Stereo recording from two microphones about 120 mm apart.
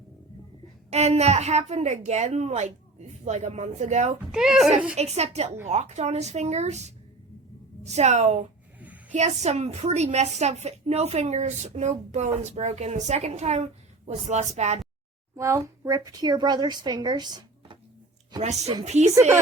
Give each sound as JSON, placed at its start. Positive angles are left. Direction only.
{"t": 0.9, "sound": "a woman's voice", "side_deg": -65}
{"t": 4.3, "sound": "speech", "side_deg": -5}
{"t": 4.9, "sound": "a woman's voice", "side_deg": -65}
{"t": 15.4, "sound": "a woman's voice", "side_deg": -25}
{"t": 18.9, "sound": "a woman's voice", "side_deg": -70}